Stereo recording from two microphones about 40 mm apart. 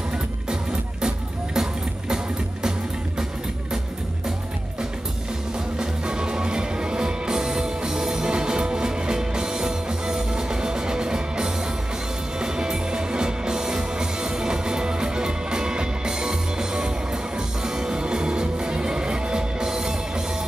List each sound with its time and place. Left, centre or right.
1.0 s music: centre
5.8 s music: right